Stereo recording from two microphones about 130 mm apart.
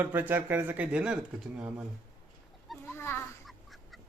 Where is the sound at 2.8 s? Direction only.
20° left (ahead or behind).